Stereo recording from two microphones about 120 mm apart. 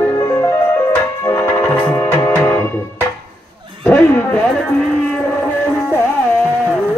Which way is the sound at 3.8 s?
15° left (ahead or behind).